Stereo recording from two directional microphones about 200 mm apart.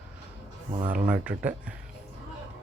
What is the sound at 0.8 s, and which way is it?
Speech, 40° right (ahead or behind).